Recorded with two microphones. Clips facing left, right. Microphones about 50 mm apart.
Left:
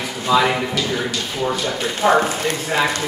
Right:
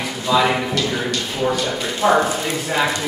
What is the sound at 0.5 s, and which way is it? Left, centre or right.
A man's voice, centre.